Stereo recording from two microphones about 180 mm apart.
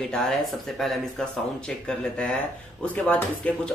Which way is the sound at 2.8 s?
10° left (ahead or behind).